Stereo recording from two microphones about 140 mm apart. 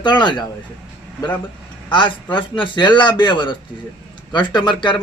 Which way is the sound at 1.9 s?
35° left (ahead or behind).